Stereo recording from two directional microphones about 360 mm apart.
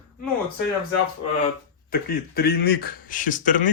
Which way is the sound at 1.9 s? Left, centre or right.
Left.